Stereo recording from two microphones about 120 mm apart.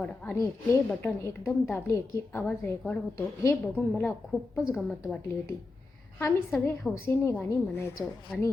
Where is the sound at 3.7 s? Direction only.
15° left (ahead or behind).